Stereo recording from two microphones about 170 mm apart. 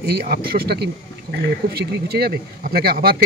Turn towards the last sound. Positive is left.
turn(degrees=-60)  # may be behind; listen again after turning